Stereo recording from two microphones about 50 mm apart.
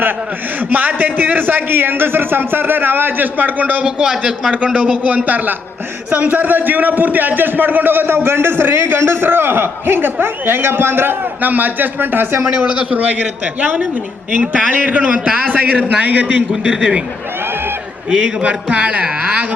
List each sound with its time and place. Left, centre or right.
0.7 s a man's voice: right
3.8 s a man's voice: right
4.1 s a man's voice: centre
4.5 s a man's voice: right
12.5 s a man's voice: right
18.1 s a man's voice: right